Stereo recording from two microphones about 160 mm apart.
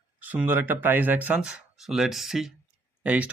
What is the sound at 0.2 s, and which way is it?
Speech, 10° right (ahead or behind).